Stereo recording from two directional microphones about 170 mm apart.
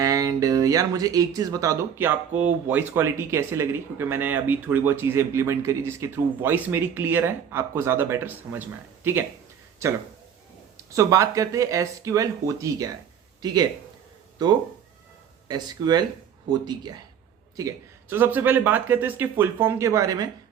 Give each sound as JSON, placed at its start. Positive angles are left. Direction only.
{"t": 0.0, "sound": "speech", "side_deg": -20}
{"t": 10.9, "sound": "speech", "side_deg": -20}
{"t": 15.4, "sound": "speech", "side_deg": -25}